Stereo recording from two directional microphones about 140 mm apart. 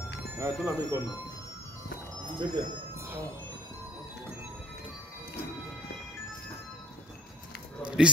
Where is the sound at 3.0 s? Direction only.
15° right (ahead or behind).